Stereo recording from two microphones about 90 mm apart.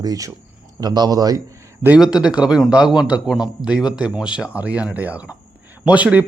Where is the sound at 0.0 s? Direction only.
40° right (ahead or behind).